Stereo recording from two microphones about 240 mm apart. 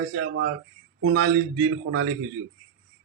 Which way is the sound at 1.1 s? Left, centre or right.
Right.